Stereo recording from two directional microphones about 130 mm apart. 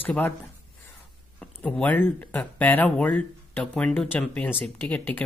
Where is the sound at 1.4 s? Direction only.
10° left (ahead or behind).